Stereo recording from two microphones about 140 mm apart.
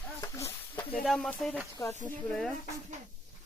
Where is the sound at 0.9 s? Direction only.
Centre (ahead or behind).